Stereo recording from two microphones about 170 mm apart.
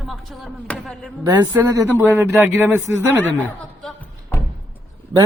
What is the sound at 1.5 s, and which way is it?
A man's voice, 20° right (ahead or behind).